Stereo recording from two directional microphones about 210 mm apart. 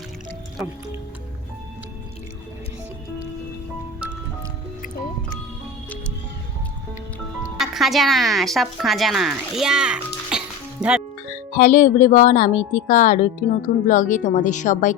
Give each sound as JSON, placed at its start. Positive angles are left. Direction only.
{"t": 7.6, "sound": "speech", "side_deg": 0}
{"t": 11.5, "sound": "a woman's voice", "side_deg": 40}